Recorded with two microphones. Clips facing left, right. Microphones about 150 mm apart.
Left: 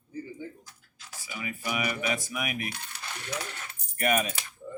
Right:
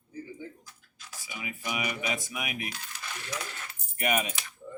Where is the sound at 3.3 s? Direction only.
30° left (ahead or behind).